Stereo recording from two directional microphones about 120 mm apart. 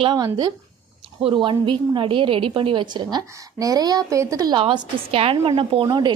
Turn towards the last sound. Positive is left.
turn(degrees=-35)  # may be behind; listen again after turning